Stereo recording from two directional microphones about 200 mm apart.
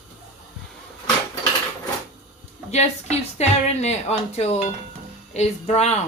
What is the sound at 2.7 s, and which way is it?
Speech, 35° left (ahead or behind).